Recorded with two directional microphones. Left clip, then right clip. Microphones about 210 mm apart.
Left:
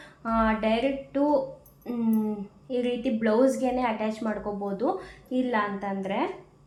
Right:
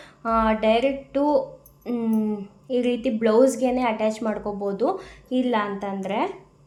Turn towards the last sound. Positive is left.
turn(degrees=-40)  # may be behind; listen again after turning